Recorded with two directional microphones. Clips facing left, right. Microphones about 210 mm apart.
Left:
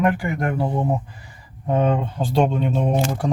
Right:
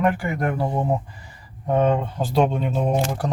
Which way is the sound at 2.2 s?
Centre (ahead or behind).